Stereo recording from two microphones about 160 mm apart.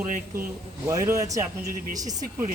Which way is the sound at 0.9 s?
20° right (ahead or behind).